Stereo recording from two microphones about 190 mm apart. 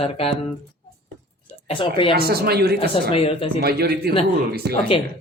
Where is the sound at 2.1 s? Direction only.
55° right (ahead or behind).